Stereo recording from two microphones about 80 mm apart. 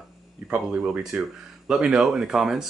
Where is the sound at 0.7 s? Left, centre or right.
Centre.